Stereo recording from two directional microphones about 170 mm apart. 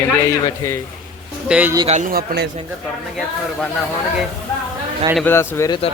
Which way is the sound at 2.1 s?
65° right (ahead or behind).